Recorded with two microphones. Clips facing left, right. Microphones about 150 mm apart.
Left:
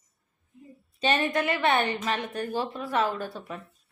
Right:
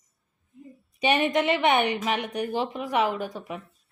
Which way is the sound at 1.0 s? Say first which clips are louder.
Right 3 dB; 15° right (ahead or behind).